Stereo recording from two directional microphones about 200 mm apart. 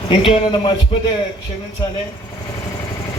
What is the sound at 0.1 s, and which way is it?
Speech, 25° left (ahead or behind).